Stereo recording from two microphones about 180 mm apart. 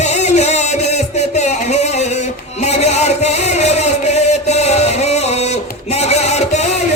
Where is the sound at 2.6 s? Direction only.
35° left (ahead or behind).